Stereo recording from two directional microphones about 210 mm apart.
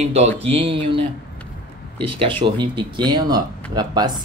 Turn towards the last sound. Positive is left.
turn(degrees=-20)  # may be behind; listen again after turning